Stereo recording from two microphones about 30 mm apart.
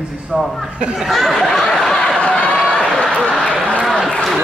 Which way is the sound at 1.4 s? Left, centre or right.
Centre.